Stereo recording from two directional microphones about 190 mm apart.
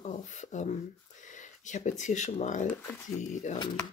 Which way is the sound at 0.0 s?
40° left (ahead or behind).